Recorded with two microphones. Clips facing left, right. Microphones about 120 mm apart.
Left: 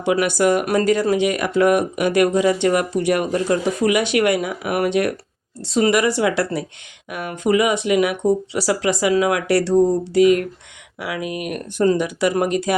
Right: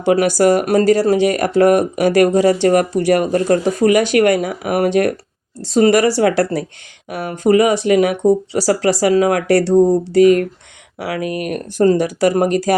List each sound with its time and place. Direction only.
0.0 s speech: 40° right (ahead or behind)